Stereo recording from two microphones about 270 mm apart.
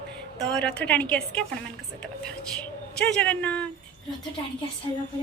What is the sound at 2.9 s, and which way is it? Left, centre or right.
Speech, centre.